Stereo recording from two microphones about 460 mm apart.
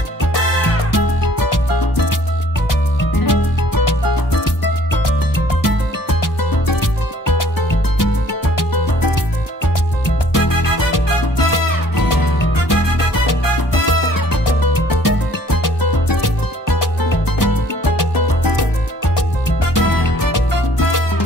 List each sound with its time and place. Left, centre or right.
0.9 s music: left
3.2 s music: left
10.3 s music: left
19.7 s music: left